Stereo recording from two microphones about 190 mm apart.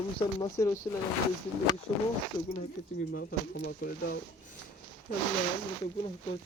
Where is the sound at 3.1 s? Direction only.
55° left (ahead or behind).